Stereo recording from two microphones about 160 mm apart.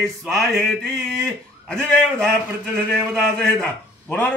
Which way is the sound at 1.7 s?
5° left (ahead or behind).